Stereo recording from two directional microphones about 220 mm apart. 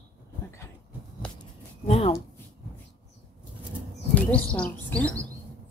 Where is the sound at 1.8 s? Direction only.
25° left (ahead or behind).